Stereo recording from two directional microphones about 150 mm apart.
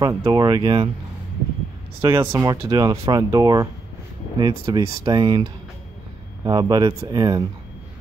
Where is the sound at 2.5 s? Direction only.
25° right (ahead or behind).